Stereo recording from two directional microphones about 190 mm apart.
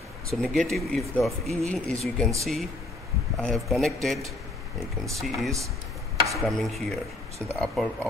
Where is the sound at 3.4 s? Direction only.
Centre (ahead or behind).